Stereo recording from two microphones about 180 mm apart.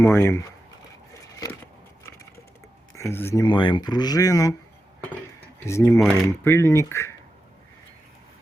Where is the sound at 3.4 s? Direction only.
25° left (ahead or behind).